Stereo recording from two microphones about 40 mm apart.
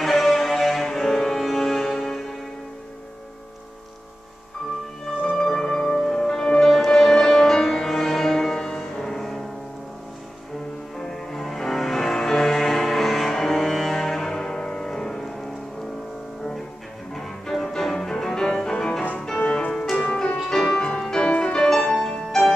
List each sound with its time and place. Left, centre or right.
0.0 s music: centre
5.4 s music: centre
11.0 s music: centre
17.1 s music: centre; by 19.7 s left
19.7 s music: centre
21.6 s music: centre